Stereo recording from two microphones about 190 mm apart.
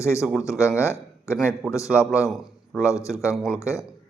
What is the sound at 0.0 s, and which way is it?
Speech, 15° left (ahead or behind).